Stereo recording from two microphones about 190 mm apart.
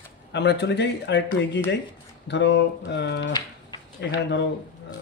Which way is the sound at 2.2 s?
65° left (ahead or behind).